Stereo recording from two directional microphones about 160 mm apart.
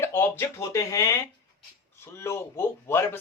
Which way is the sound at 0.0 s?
15° left (ahead or behind).